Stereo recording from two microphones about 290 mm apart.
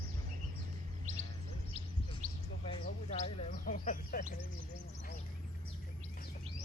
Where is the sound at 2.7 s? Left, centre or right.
Left.